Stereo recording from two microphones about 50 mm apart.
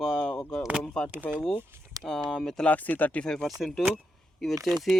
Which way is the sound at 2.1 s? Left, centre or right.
Centre.